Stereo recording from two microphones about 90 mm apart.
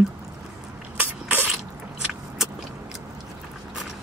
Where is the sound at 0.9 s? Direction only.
20° right (ahead or behind).